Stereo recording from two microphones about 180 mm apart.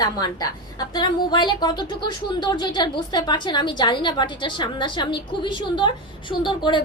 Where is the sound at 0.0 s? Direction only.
20° left (ahead or behind).